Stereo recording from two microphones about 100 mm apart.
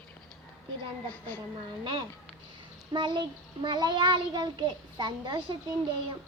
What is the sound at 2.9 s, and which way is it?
A child's voice, 50° right (ahead or behind).